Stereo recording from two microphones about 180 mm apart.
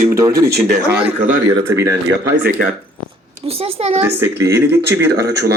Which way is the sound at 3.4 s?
30° right (ahead or behind).